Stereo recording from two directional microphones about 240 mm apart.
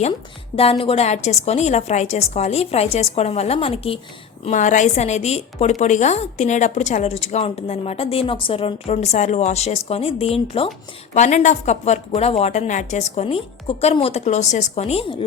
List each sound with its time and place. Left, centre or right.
0.5 s a woman's voice: left